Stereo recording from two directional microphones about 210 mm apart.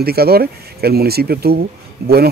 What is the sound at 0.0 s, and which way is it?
Speech, 50° right (ahead or behind).